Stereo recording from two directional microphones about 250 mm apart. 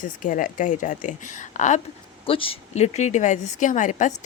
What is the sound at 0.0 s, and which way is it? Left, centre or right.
A woman's voice, left.